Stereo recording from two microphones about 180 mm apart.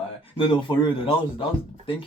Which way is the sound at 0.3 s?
30° left (ahead or behind).